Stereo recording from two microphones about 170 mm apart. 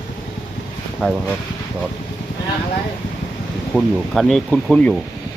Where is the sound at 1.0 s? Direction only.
5° left (ahead or behind).